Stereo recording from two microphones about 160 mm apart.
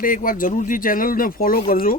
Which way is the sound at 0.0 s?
60° left (ahead or behind).